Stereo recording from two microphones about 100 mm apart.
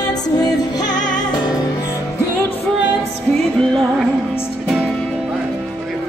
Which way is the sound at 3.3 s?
Centre (ahead or behind).